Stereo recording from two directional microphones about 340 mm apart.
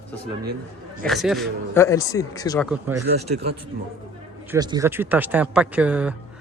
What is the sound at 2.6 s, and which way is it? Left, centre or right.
Speech, centre.